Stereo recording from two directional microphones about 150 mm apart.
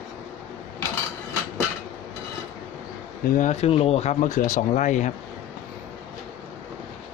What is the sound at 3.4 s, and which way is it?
Speech, 45° left (ahead or behind).